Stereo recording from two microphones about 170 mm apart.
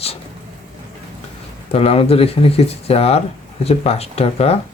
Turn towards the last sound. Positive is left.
turn(degrees=35)  # may be behind; listen again after turning